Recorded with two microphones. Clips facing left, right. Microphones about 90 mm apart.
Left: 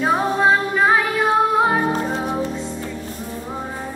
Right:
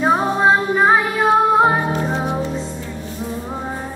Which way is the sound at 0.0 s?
20° right (ahead or behind).